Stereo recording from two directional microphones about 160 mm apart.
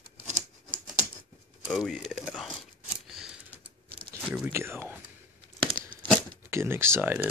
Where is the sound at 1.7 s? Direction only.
Centre (ahead or behind).